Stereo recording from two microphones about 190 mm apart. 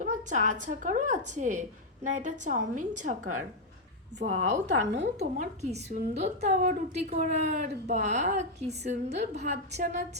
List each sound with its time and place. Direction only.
0.0 s a woman's voice: 40° right (ahead or behind)
4.6 s a woman's voice: 65° right (ahead or behind)
5.4 s a woman's voice: 40° right (ahead or behind)